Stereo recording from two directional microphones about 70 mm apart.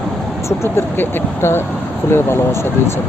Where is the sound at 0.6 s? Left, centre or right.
Left.